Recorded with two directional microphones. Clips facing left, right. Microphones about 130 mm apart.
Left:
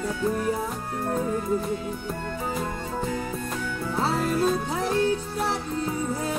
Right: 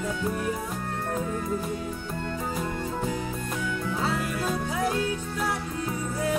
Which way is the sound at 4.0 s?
30° left (ahead or behind).